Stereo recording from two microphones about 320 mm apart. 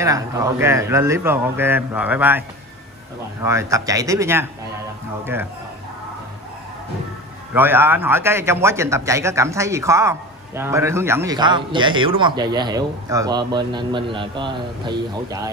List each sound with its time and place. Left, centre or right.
0.0 s a man's voice: centre
3.4 s a man's voice: centre
7.5 s a man's voice: centre